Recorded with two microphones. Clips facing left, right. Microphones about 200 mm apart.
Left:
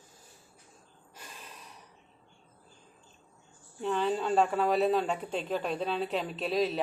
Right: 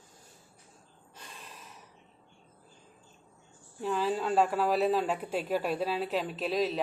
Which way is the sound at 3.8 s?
5° right (ahead or behind).